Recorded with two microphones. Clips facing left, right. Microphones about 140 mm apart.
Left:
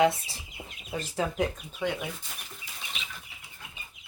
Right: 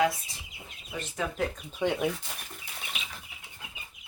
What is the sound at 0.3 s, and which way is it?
Speech, 35° left (ahead or behind).